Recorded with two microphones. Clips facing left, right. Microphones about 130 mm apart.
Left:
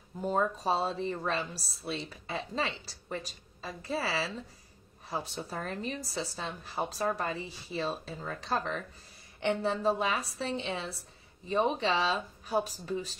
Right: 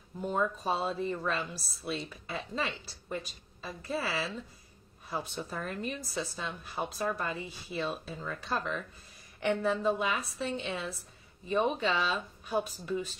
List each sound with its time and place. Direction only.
0.2 s a woman's voice: 35° left (ahead or behind)